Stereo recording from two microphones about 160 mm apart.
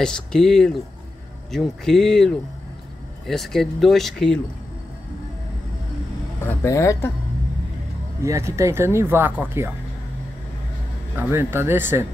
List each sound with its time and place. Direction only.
0.0 s speech: 5° left (ahead or behind)
6.4 s speech: 15° left (ahead or behind)
8.2 s speech: 20° right (ahead or behind)
11.1 s speech: 15° right (ahead or behind)